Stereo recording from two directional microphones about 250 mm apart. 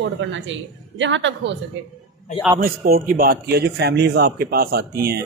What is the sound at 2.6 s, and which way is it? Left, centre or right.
Speech, right.